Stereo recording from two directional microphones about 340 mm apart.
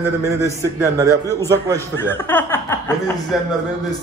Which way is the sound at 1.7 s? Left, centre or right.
Centre.